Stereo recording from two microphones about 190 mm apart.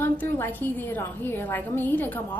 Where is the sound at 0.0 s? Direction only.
10° left (ahead or behind).